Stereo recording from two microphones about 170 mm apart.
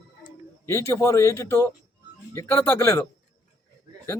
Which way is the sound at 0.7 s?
15° left (ahead or behind).